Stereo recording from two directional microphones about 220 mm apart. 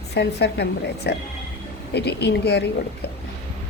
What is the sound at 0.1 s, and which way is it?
Speech, 50° left (ahead or behind).